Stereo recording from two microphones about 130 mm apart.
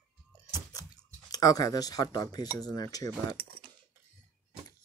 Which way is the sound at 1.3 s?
30° left (ahead or behind).